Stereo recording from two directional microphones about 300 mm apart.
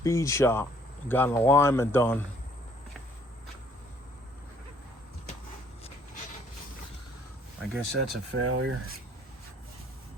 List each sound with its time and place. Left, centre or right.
0.0 s speech: centre
7.6 s speech: centre
8.4 s speech: right